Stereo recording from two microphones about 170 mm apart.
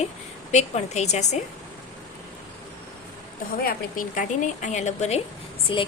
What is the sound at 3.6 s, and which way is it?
A woman's voice, 55° left (ahead or behind).